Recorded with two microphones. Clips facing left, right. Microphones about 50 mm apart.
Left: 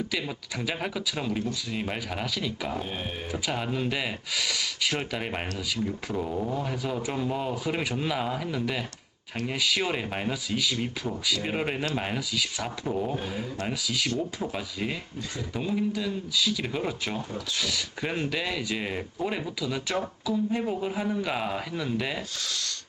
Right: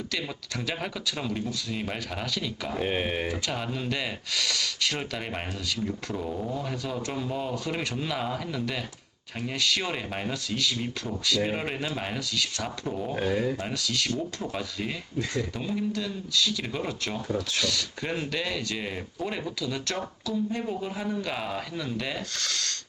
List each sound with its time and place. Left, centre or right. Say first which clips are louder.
0.6 s speech: left 2 dB; centre
2.8 s speech: right 7 dB; right
3.4 s speech: left 2 dB; centre
22.4 s speech: right 2 dB; right